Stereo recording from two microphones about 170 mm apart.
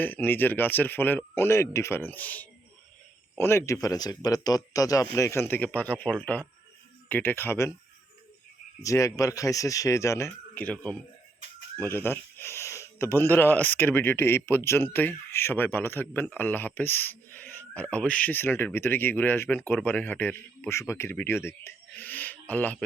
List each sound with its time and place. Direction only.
0.0 s speech: 10° left (ahead or behind)
8.8 s speech: 20° left (ahead or behind)
11.8 s speech: 15° left (ahead or behind)